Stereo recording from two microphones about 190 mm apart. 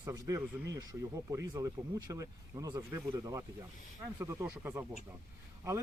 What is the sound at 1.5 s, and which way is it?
Speech, 20° right (ahead or behind).